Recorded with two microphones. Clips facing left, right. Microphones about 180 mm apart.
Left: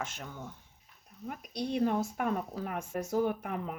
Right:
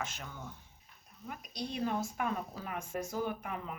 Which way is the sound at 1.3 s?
65° left (ahead or behind).